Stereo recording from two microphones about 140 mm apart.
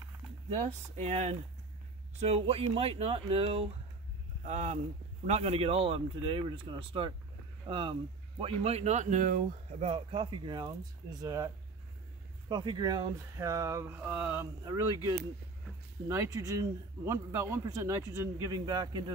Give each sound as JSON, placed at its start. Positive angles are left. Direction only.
{"t": 0.5, "sound": "speech", "side_deg": -50}
{"t": 2.1, "sound": "speech", "side_deg": -45}
{"t": 4.5, "sound": "speech", "side_deg": -60}
{"t": 5.2, "sound": "speech", "side_deg": -45}
{"t": 9.8, "sound": "speech", "side_deg": -45}